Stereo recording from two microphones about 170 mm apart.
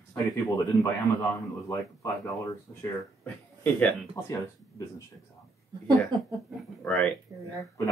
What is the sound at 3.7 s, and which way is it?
Speech, 10° left (ahead or behind).